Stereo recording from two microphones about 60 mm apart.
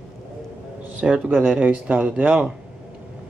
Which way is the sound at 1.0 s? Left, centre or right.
Centre.